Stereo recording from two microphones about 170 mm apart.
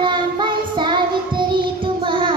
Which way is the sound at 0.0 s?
30° right (ahead or behind).